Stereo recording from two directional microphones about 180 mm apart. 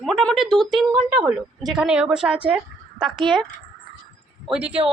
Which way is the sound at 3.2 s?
25° right (ahead or behind).